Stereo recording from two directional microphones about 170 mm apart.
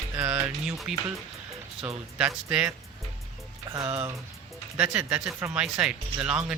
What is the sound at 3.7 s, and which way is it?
Speech, 20° right (ahead or behind).